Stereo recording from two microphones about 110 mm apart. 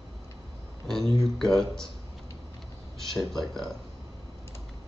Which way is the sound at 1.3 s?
5° left (ahead or behind).